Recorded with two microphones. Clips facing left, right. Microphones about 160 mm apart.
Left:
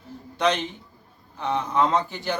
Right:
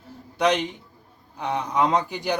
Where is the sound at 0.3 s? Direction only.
10° right (ahead or behind).